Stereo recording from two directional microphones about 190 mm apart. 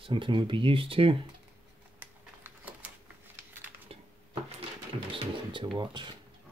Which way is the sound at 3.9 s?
30° right (ahead or behind).